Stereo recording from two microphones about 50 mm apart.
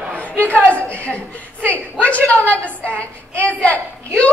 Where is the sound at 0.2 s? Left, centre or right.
Left.